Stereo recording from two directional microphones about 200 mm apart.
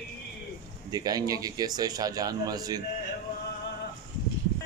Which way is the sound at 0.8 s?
20° right (ahead or behind).